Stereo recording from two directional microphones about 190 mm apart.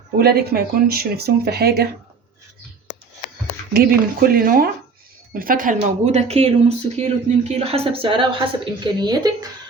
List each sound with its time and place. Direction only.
0.2 s speech: 55° right (ahead or behind)
3.7 s speech: 55° right (ahead or behind); by 9.5 s 20° right (ahead or behind)